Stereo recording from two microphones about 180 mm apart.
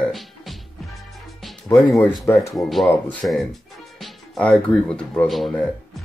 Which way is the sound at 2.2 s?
15° left (ahead or behind).